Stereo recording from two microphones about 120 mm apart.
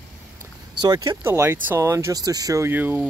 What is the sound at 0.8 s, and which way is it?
Speech, 35° right (ahead or behind).